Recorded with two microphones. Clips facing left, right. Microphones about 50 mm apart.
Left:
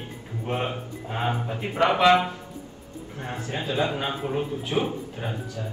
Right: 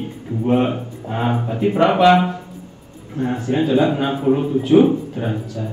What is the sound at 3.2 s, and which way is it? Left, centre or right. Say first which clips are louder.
Speech: right 12 dB; right.